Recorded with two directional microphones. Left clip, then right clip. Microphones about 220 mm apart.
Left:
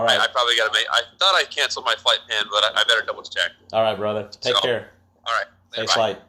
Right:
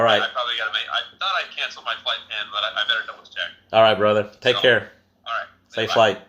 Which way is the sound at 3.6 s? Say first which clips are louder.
Right 8 dB; 25° right (ahead or behind).